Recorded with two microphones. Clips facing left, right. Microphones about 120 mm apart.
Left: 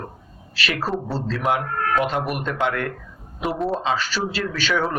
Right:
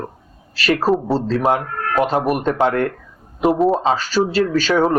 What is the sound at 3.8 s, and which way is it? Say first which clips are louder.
Speech: right 6 dB; 35° right (ahead or behind).